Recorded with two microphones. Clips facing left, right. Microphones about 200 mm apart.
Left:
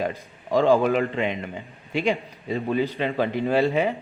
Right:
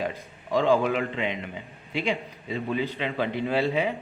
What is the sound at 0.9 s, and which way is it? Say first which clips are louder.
A man's voice: left 4 dB; 45° left (ahead or behind).